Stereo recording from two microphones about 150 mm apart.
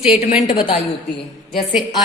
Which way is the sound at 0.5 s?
35° left (ahead or behind).